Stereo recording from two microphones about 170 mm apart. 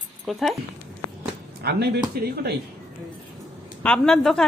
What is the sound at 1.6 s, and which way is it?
Speech, 70° right (ahead or behind).